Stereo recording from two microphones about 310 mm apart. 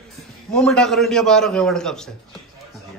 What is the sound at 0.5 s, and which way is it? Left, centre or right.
A man's voice, centre.